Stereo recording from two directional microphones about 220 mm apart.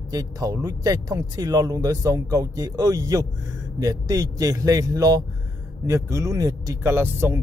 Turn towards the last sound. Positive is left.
turn(degrees=-10)  # may be behind; listen again after turning